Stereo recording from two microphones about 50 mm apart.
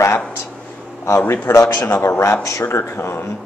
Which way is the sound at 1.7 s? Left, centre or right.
Left.